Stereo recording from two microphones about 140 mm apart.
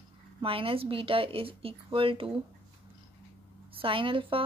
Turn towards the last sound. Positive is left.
turn(degrees=-40)  # may be behind; listen again after turning